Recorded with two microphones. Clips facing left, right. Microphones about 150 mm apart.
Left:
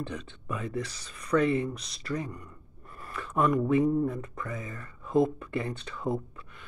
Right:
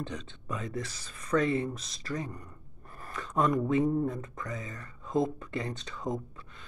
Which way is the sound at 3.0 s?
40° right (ahead or behind).